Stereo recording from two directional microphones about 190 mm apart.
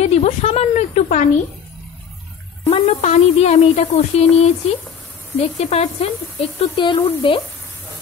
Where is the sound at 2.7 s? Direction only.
30° left (ahead or behind).